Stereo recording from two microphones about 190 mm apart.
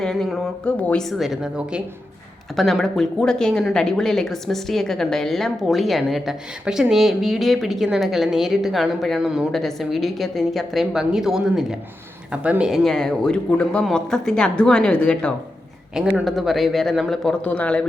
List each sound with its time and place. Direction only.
0.0 s a woman's voice: centre (ahead or behind)